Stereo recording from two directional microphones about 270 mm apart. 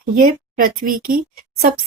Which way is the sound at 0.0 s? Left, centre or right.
Right.